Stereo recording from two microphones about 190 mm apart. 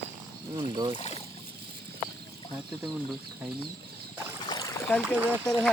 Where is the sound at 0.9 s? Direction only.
30° left (ahead or behind).